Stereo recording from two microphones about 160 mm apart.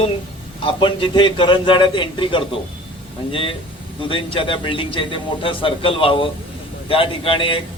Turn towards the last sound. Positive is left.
turn(degrees=35)  # may be behind; listen again after turning